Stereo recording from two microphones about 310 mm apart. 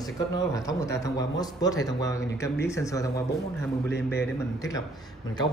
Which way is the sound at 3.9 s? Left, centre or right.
Left.